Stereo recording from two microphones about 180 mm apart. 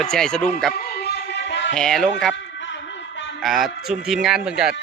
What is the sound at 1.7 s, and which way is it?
Speech, 5° left (ahead or behind).